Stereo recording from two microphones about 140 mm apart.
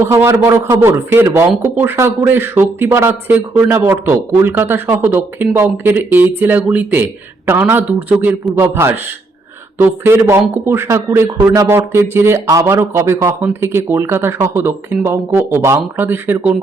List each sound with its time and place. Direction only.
0.0 s a man's voice: 20° right (ahead or behind)